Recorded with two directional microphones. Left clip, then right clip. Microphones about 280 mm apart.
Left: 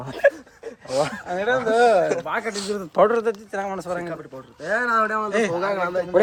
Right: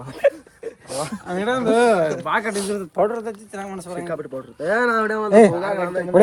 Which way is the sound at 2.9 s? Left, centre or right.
Left.